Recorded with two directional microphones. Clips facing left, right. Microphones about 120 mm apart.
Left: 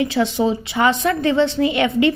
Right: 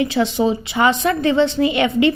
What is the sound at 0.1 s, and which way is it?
A woman's voice, 20° right (ahead or behind).